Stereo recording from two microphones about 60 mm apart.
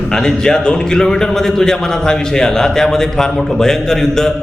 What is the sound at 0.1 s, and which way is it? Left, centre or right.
A man's voice, centre.